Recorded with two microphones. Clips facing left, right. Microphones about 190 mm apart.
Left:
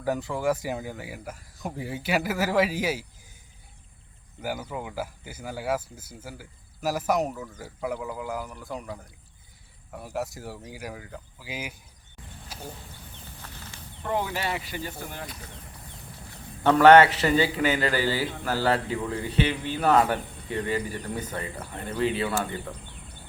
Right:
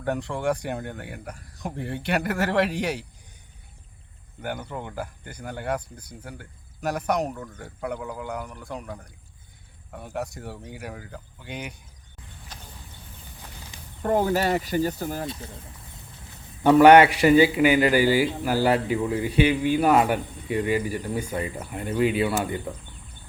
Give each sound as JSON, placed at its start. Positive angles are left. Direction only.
{"t": 0.0, "sound": "speech", "side_deg": 0}
{"t": 4.4, "sound": "speech", "side_deg": 5}
{"t": 12.5, "sound": "a sound", "side_deg": 10}
{"t": 13.4, "sound": "a sound", "side_deg": -15}
{"t": 14.0, "sound": "speech", "side_deg": -45}
{"t": 15.2, "sound": "speech", "side_deg": -25}
{"t": 16.6, "sound": "a man's voice", "side_deg": -10}